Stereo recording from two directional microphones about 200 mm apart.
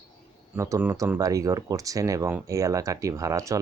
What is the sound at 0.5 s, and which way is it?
Speech, 15° right (ahead or behind).